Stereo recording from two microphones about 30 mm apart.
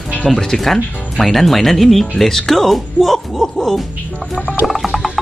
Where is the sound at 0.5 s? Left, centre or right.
Centre.